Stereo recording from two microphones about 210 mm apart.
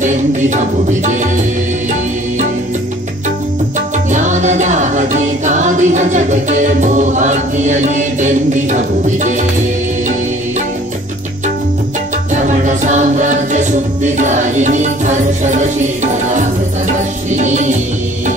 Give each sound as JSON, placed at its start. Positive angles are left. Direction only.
{"t": 0.8, "sound": "music", "side_deg": -35}
{"t": 4.1, "sound": "music", "side_deg": -35}
{"t": 12.4, "sound": "music", "side_deg": -35}